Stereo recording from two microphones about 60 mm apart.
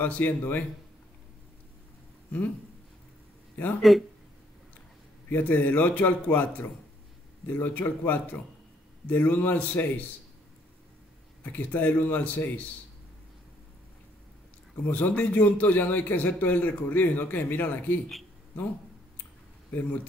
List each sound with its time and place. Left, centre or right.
0.0 s speech: left
3.9 s speech: centre
5.3 s a man's voice: left
11.4 s speech: left
14.8 s a man's voice: left